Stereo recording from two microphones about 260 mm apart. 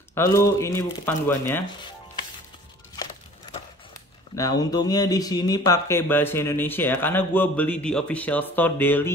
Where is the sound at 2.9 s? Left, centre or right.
Centre.